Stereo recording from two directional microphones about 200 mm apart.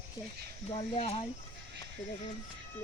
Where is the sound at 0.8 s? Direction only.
30° left (ahead or behind).